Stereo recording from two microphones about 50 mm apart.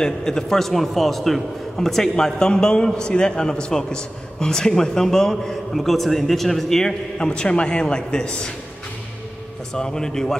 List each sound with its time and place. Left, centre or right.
0.0 s a man's voice: centre
9.8 s a man's voice: centre